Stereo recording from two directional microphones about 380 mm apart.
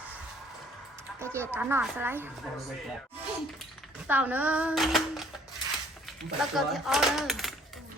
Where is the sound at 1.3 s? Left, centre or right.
Centre.